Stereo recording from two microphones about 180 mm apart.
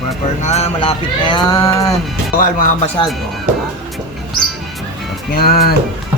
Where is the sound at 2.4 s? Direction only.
50° left (ahead or behind).